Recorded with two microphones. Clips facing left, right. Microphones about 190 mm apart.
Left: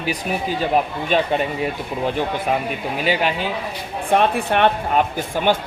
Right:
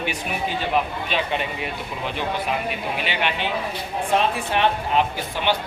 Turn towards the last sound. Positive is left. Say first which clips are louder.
# left 4 dB
turn(degrees=45)  # may be behind; listen again after turning